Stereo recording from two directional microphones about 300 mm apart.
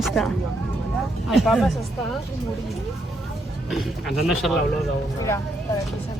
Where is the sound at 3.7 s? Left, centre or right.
Centre.